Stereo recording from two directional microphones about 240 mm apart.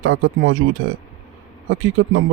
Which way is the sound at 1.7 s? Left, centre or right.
Right.